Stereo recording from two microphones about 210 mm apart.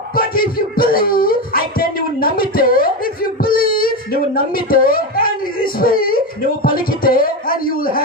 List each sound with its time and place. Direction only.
0.1 s speech: 45° left (ahead or behind)